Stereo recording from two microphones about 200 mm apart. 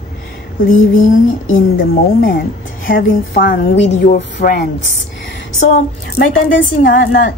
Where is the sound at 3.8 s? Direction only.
40° left (ahead or behind).